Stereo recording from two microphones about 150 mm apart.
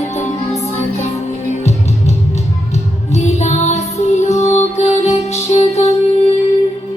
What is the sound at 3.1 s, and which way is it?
Music, 50° left (ahead or behind).